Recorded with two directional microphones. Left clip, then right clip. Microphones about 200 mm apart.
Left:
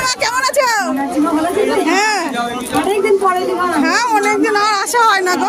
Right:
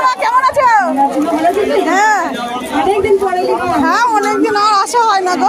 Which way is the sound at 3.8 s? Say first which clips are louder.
Right 2 dB; 20° left (ahead or behind).